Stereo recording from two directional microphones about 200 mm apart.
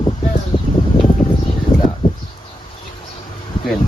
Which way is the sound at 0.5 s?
25° left (ahead or behind).